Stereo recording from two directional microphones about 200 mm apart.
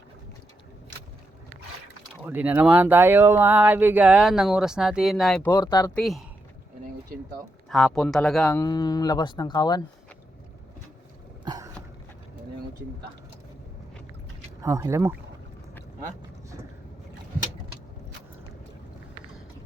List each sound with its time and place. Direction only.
2.2 s speech: 10° right (ahead or behind)
5.5 s speech: 15° left (ahead or behind)
5.9 s speech: centre (ahead or behind)
7.7 s speech: 5° left (ahead or behind); by 9.8 s 20° left (ahead or behind)
11.4 s a sound: 20° right (ahead or behind)
14.6 s speech: 15° right (ahead or behind)